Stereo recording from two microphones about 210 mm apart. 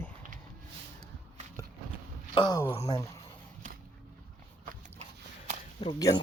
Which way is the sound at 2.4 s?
15° left (ahead or behind).